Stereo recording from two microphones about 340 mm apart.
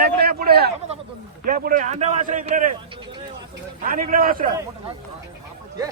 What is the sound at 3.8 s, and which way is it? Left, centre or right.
Speech, right.